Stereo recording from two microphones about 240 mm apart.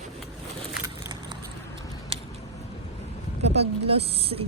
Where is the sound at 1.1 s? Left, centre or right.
Centre.